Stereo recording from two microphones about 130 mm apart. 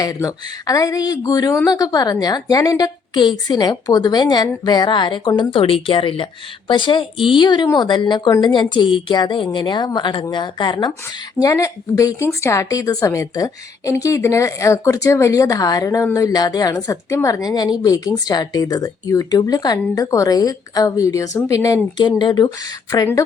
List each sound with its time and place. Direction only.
0.0 s a woman's voice: 25° left (ahead or behind)